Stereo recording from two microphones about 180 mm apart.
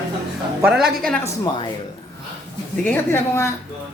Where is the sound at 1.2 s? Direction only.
15° left (ahead or behind).